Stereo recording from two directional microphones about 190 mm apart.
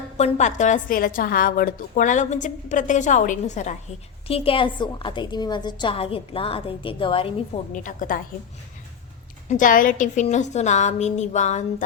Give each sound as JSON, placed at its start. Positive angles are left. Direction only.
{"t": 0.2, "sound": "a woman's voice", "side_deg": 40}
{"t": 7.7, "sound": "a woman's voice", "side_deg": 45}
{"t": 9.5, "sound": "a woman's voice", "side_deg": 45}